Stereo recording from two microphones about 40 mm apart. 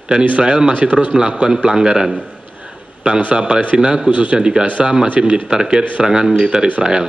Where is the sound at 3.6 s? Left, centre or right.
Right.